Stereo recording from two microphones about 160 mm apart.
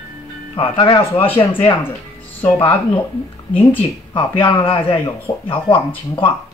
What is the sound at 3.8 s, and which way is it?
Speech, 35° left (ahead or behind).